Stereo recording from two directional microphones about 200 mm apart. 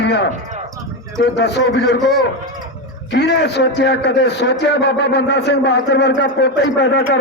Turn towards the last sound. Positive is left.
turn(degrees=60)  # may be behind; listen again after turning